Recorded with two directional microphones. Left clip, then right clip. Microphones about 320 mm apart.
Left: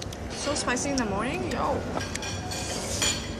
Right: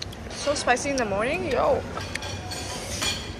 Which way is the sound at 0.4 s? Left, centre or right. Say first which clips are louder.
Right 5 dB; centre.